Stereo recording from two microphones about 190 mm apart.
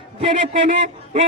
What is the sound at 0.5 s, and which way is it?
Speech, 40° right (ahead or behind).